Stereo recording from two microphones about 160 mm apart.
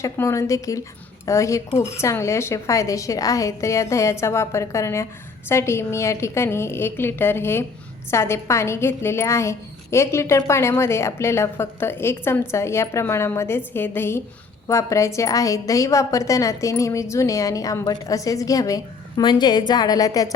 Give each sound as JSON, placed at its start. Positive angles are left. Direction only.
{"t": 0.0, "sound": "a woman's voice", "side_deg": 20}
{"t": 1.7, "sound": "speech", "side_deg": 40}
{"t": 2.0, "sound": "a woman's voice", "side_deg": 20}